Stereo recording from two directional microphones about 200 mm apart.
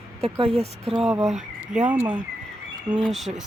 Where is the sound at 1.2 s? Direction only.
Centre (ahead or behind).